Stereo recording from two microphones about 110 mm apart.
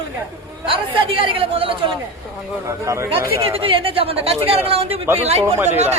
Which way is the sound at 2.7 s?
25° right (ahead or behind).